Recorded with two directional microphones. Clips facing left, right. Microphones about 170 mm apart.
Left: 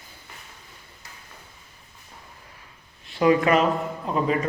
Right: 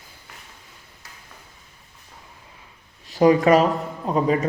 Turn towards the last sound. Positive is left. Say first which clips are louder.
# right 3 dB
turn(degrees=-35)  # may be behind; listen again after turning